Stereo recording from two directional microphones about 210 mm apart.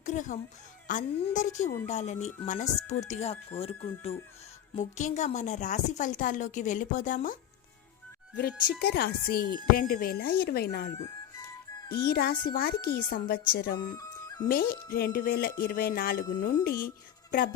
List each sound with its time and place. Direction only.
0.0 s speech: 35° left (ahead or behind)
8.4 s a woman's voice: 45° left (ahead or behind)
12.0 s a woman's voice: 45° left (ahead or behind)
13.9 s music: 15° left (ahead or behind)
14.4 s a woman's voice: 45° left (ahead or behind)